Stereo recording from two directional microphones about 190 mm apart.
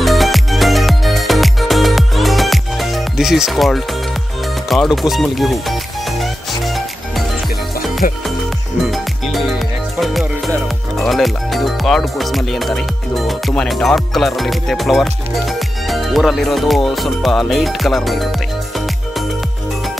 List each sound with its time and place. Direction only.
0.0 s music: centre (ahead or behind)
8.0 s speech: 45° left (ahead or behind)
8.8 s music: centre (ahead or behind)
11.0 s speech: centre (ahead or behind)